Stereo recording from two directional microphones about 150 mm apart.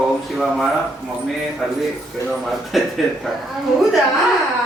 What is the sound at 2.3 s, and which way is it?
Speech, centre (ahead or behind).